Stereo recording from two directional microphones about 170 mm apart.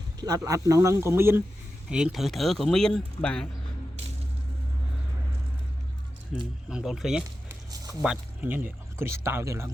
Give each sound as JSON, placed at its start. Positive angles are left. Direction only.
{"t": 0.2, "sound": "speech", "side_deg": -20}
{"t": 1.9, "sound": "speech", "side_deg": -5}
{"t": 6.3, "sound": "speech", "side_deg": 0}
{"t": 7.4, "sound": "a sound", "side_deg": -20}
{"t": 8.0, "sound": "speech", "side_deg": -5}